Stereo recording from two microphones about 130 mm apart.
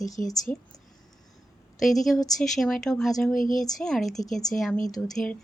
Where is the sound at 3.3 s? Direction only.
90° left.